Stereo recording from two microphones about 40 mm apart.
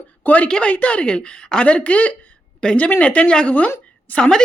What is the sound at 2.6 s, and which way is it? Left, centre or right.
Speech, left.